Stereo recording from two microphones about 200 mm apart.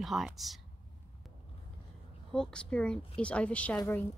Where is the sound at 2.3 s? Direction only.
5° left (ahead or behind).